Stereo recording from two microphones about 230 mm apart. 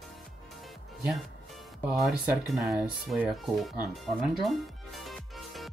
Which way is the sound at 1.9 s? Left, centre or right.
Centre.